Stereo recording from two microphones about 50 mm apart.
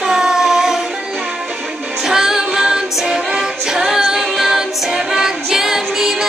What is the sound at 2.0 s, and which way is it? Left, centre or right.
Music, centre.